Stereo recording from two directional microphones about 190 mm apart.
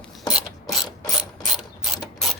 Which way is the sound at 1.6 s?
Centre (ahead or behind).